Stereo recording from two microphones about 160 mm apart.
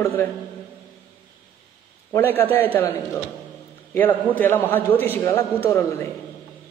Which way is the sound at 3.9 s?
10° left (ahead or behind).